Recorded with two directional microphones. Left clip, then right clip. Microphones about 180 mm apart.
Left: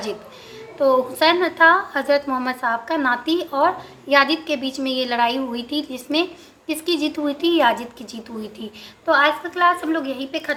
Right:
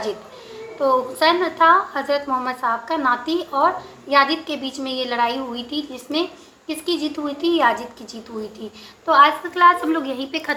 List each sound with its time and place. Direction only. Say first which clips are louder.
0.8 s a woman's voice: left 1 dB; 25° left (ahead or behind)
9.0 s a woman's voice: right 3 dB; 20° left (ahead or behind)
9.6 s a woman's voice: right 5 dB; centre (ahead or behind)